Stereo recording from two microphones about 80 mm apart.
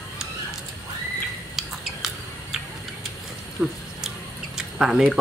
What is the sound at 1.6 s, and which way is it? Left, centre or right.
Scissors, centre.